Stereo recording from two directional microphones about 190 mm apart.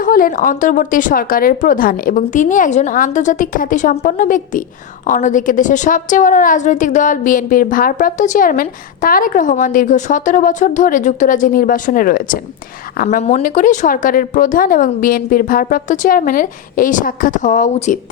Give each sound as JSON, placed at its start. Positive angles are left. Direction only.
{"t": 0.0, "sound": "a woman's voice", "side_deg": 50}
{"t": 13.2, "sound": "a woman's voice", "side_deg": 40}